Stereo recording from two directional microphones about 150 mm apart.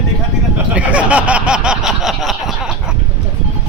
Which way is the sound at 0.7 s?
10° right (ahead or behind).